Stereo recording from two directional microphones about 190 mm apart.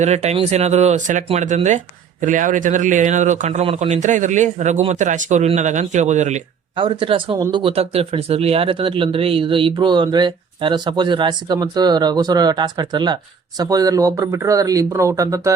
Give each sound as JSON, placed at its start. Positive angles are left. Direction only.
{"t": 0.0, "sound": "speech", "side_deg": -35}
{"t": 6.7, "sound": "speech", "side_deg": -25}